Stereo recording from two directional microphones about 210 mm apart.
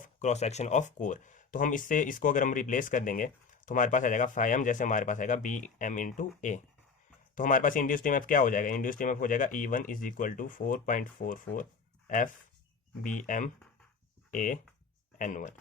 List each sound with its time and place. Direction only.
0.0 s speech: 35° left (ahead or behind)